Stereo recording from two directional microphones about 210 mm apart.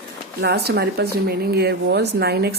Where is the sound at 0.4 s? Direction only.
50° right (ahead or behind).